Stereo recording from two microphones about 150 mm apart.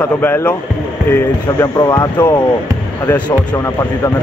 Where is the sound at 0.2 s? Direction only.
15° left (ahead or behind).